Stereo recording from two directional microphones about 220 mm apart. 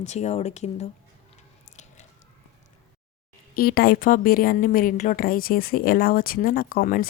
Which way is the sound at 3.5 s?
45° left (ahead or behind).